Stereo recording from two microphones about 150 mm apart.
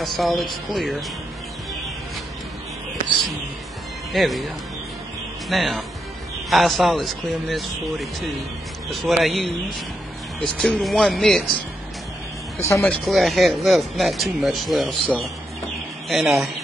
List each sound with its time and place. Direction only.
0.0 s speech: centre (ahead or behind)
4.1 s speech: centre (ahead or behind)
5.5 s speech: centre (ahead or behind)
10.6 s speech: centre (ahead or behind)
12.5 s speech: 20° left (ahead or behind)
12.9 s speech: centre (ahead or behind)